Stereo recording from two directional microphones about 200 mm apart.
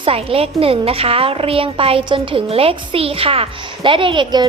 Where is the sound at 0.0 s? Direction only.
30° right (ahead or behind).